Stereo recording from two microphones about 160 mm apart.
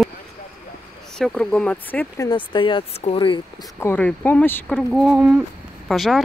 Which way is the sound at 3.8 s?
10° left (ahead or behind).